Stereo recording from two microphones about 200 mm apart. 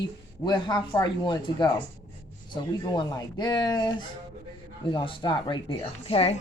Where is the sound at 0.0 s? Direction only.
20° left (ahead or behind).